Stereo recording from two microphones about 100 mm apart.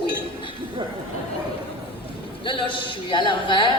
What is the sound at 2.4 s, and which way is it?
A man's voice, 55° left (ahead or behind).